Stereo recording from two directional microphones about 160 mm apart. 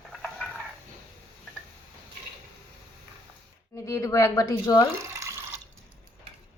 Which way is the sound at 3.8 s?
20° left (ahead or behind).